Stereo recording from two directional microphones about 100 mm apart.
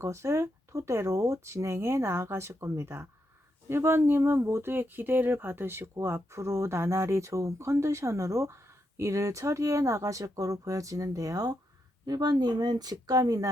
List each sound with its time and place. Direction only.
0.0 s speech: 30° right (ahead or behind)